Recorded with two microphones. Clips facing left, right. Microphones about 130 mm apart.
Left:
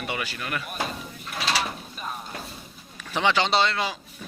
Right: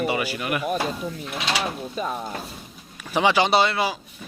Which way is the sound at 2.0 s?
90° right.